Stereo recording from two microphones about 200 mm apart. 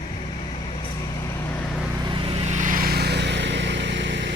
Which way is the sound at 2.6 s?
45° right (ahead or behind).